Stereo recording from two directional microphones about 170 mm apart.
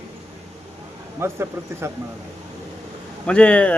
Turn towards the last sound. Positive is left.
turn(degrees=5)  # may be behind; listen again after turning